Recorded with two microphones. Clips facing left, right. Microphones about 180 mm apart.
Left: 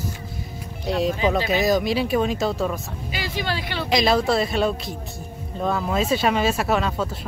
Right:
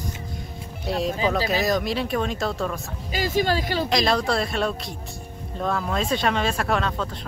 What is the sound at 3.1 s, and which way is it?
Speech, 45° right (ahead or behind).